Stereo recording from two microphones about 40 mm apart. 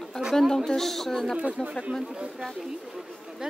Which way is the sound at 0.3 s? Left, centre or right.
Centre.